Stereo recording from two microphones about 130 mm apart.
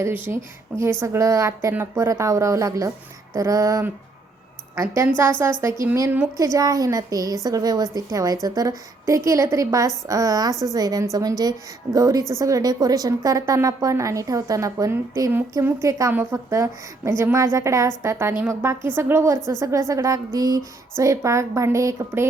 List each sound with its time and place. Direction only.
0.3 s a woman's voice: 10° right (ahead or behind)
5.1 s a woman's voice: 20° right (ahead or behind)